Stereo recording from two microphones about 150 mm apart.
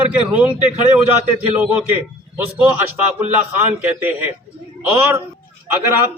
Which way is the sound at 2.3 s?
10° right (ahead or behind).